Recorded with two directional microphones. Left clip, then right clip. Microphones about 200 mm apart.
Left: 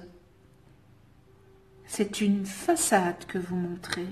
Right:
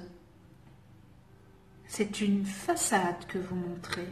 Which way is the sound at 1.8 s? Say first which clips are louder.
Left 3 dB; 50° left (ahead or behind).